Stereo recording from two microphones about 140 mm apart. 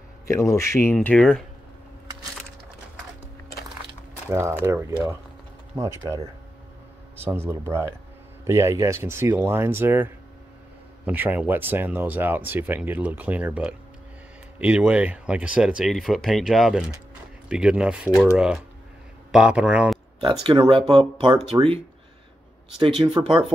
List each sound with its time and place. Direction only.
0.3 s speech: 20° left (ahead or behind)
0.9 s speech: 5° left (ahead or behind)
4.3 s speech: 20° right (ahead or behind)
7.2 s speech: 15° right (ahead or behind)
20.2 s speech: 35° right (ahead or behind)
22.8 s speech: 40° right (ahead or behind)